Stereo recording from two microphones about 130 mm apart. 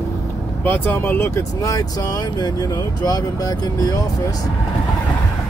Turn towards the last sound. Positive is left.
turn(degrees=30)  # may be behind; listen again after turning